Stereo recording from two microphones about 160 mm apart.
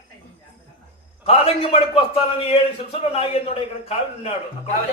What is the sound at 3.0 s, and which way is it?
A man's voice, 40° left (ahead or behind).